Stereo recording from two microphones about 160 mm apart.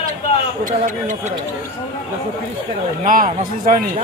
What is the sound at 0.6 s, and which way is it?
Speech, 55° right (ahead or behind).